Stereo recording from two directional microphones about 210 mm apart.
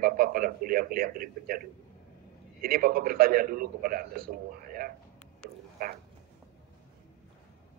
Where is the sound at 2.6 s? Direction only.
45° right (ahead or behind).